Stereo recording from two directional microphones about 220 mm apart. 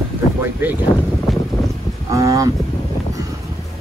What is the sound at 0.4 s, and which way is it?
Speech, 10° right (ahead or behind).